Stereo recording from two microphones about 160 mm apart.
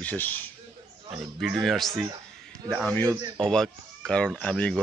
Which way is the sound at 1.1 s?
5° right (ahead or behind).